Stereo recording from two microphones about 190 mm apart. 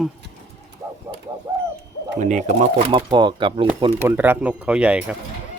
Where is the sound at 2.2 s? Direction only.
40° right (ahead or behind).